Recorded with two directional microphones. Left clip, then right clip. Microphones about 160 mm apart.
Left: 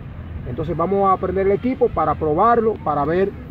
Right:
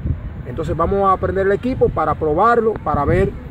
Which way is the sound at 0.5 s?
10° right (ahead or behind).